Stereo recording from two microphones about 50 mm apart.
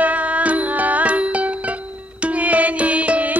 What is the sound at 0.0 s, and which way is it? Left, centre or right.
Music, right.